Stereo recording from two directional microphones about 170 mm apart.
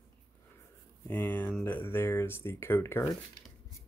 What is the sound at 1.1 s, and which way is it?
Speech, 10° left (ahead or behind).